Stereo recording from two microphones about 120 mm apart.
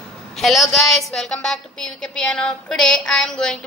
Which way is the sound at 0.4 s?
Centre (ahead or behind).